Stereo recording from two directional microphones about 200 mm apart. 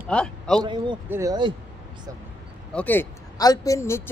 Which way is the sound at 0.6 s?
25° right (ahead or behind).